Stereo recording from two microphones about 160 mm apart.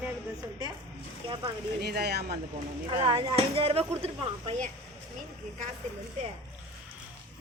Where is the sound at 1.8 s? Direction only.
85° right.